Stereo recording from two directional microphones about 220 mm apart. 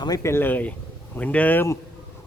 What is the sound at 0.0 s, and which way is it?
Speech, 15° left (ahead or behind).